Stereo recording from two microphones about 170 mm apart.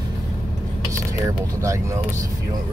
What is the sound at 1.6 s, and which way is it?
Speech, 20° right (ahead or behind).